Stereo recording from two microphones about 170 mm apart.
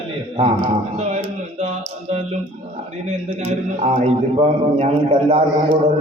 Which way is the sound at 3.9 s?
40° right (ahead or behind).